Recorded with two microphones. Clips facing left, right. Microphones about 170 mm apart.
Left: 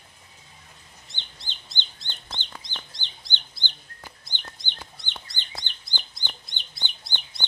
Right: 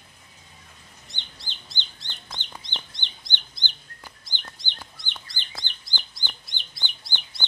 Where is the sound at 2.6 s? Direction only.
25° right (ahead or behind).